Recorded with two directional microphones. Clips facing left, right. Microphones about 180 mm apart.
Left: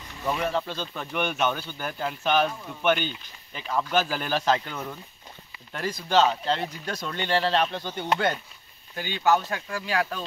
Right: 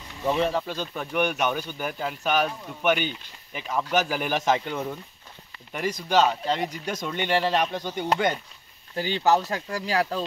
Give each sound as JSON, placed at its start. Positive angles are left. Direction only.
{"t": 0.2, "sound": "speech", "side_deg": -20}
{"t": 8.9, "sound": "speech", "side_deg": -30}